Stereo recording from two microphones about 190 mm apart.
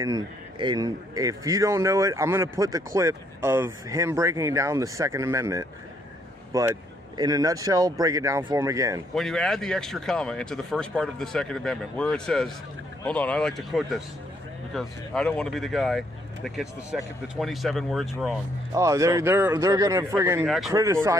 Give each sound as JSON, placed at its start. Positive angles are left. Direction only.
{"t": 0.0, "sound": "a man's voice", "side_deg": -20}
{"t": 9.1, "sound": "speech", "side_deg": 5}
{"t": 18.7, "sound": "a man's voice", "side_deg": -15}
{"t": 20.4, "sound": "speech", "side_deg": 0}
{"t": 20.7, "sound": "a man's voice", "side_deg": -15}